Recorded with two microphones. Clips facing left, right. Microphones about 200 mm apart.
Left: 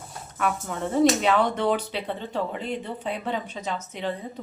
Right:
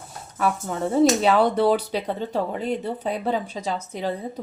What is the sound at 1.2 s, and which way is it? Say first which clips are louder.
Speech: right 4 dB; 35° right (ahead or behind).